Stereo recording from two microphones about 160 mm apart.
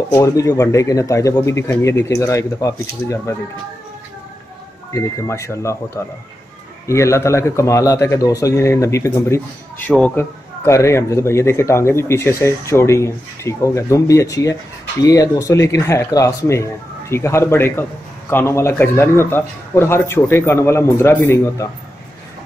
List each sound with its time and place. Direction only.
0.1 s speech: 20° left (ahead or behind)
4.9 s speech: 20° left (ahead or behind)
6.9 s speech: 15° left (ahead or behind)